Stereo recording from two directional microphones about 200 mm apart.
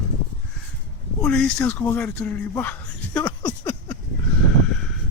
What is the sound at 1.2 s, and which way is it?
Speech, 5° left (ahead or behind).